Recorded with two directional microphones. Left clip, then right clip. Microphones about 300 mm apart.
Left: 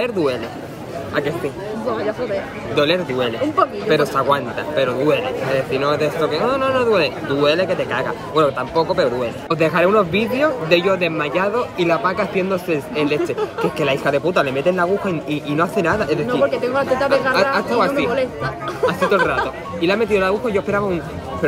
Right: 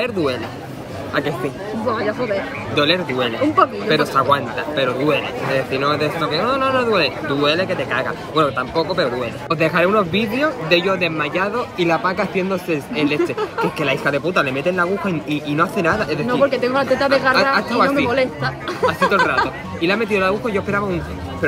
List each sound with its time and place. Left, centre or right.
0.0 s a man's voice: centre
1.9 s speech: right
2.7 s a man's voice: centre
16.3 s speech: right
17.3 s a man's voice: centre
18.1 s speech: right
18.9 s a man's voice: centre